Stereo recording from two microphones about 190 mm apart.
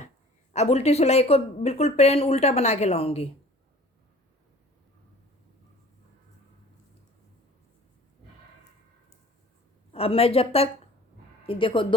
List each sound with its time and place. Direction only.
0.5 s speech: 35° left (ahead or behind)
9.9 s speech: 30° left (ahead or behind)